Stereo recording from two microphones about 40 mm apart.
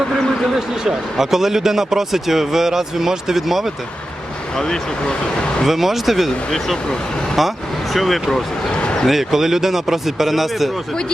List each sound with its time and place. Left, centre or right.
0.5 s speech: centre
4.5 s speech: centre
5.6 s speech: centre
7.9 s speech: centre
8.8 s a sound: left
9.0 s speech: centre